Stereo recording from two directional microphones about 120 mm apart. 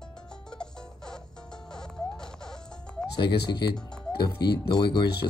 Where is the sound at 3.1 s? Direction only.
40° left (ahead or behind).